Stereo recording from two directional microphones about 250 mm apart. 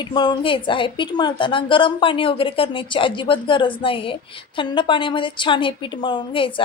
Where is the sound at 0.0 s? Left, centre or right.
Centre.